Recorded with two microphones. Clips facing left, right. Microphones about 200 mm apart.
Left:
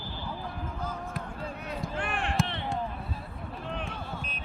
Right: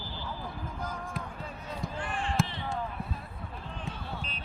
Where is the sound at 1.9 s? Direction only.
65° left (ahead or behind).